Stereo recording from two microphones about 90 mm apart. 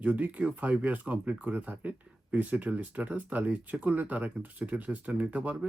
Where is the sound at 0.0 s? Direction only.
15° right (ahead or behind).